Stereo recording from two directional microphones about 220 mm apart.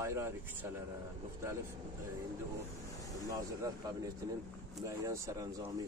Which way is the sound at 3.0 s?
15° right (ahead or behind).